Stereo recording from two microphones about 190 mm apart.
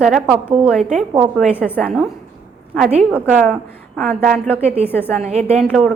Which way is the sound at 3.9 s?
Centre (ahead or behind).